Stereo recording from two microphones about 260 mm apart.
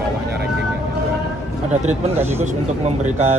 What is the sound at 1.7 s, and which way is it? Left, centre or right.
Speech, right.